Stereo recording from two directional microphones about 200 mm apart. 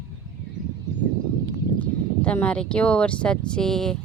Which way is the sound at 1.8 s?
10° left (ahead or behind).